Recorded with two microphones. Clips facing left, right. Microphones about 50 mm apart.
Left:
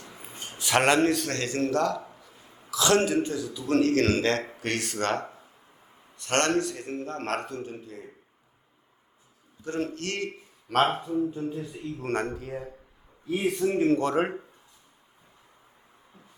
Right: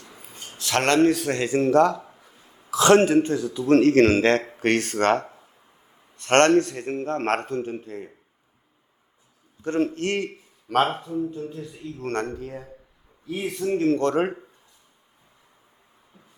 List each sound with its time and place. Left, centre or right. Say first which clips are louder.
0.2 s a sound: even; left; by 1.3 s centre
1.3 s speech: right 7 dB; centre
2.6 s a man's voice: right 7 dB; right
9.6 s a man's voice: right 7 dB; right
10.9 s speech: even; centre